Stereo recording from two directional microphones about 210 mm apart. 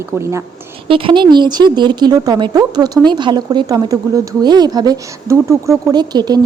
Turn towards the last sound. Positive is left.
turn(degrees=-20)  # may be behind; listen again after turning